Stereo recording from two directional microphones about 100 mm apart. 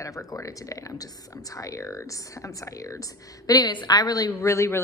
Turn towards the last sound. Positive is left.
turn(degrees=30)  # may be behind; listen again after turning